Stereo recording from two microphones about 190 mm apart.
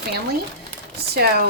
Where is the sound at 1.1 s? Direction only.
55° right (ahead or behind).